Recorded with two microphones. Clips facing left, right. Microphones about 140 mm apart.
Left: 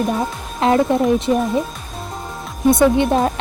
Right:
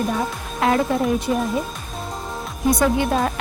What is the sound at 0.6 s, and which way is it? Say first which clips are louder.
Speech: left 4 dB; 25° left (ahead or behind).